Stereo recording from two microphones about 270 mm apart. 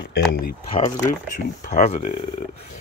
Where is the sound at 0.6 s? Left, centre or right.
Left.